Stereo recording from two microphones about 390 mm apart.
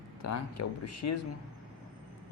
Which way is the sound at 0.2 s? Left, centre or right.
Left.